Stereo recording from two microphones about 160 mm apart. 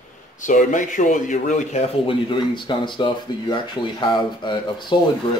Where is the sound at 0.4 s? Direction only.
55° left (ahead or behind); by 4.9 s 30° left (ahead or behind).